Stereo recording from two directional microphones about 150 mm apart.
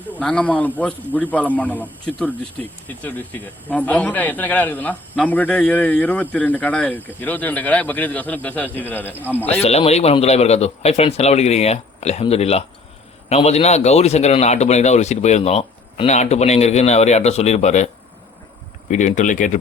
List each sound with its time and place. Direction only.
0.1 s a man's voice: 10° left (ahead or behind)
9.1 s speech: 10° right (ahead or behind)
9.6 s a man's voice: 45° left (ahead or behind)
18.9 s speech: 55° left (ahead or behind)